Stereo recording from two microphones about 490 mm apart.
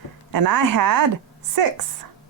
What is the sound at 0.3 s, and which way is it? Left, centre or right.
Speech, right.